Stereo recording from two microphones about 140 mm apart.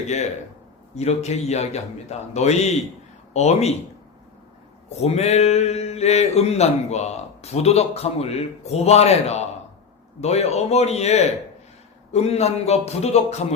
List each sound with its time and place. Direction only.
0.9 s speech: 50° left (ahead or behind)
4.9 s speech: 50° left (ahead or behind)